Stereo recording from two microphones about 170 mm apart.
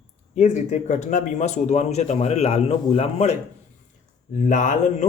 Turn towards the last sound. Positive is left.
turn(degrees=45)  # may be behind; listen again after turning